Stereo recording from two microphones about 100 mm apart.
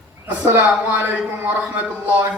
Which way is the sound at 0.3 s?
15° right (ahead or behind).